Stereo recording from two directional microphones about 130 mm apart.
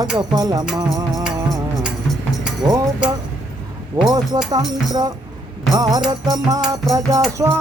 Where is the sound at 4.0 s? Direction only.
30° right (ahead or behind).